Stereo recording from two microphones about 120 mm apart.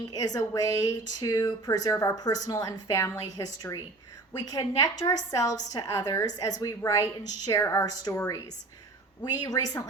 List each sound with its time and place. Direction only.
0.1 s a woman's voice: 30° left (ahead or behind)
9.4 s a woman's voice: 30° left (ahead or behind)